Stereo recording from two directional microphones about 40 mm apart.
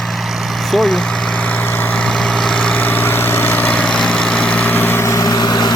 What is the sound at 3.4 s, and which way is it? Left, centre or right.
Vehicle, left.